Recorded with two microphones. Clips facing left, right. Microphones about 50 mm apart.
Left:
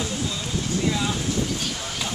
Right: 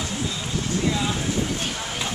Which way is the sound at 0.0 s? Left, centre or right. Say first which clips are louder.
Even; centre.